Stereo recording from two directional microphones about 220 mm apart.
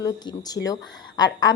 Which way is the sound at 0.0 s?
15° left (ahead or behind).